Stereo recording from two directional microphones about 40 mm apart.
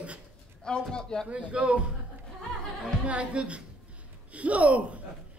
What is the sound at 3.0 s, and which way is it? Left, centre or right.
A man's voice, right.